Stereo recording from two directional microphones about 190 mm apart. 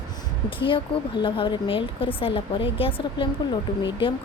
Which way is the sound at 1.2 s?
25° left (ahead or behind).